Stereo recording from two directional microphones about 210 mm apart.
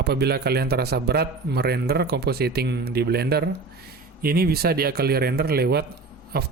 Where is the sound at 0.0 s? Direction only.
50° right (ahead or behind).